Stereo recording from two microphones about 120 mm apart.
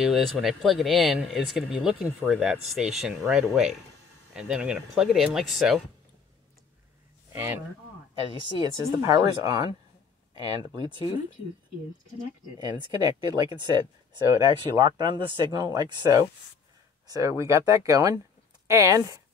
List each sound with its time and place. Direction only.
0.0 s speech: centre (ahead or behind)
7.3 s speech: 20° right (ahead or behind)
9.0 s speech: 30° right (ahead or behind)
12.5 s speech: 40° right (ahead or behind)